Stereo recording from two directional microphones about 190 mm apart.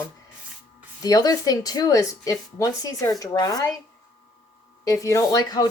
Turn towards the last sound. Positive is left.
turn(degrees=20)  # may be behind; listen again after turning